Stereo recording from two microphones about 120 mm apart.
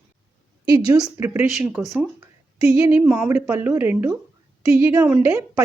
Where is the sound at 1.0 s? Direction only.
20° right (ahead or behind).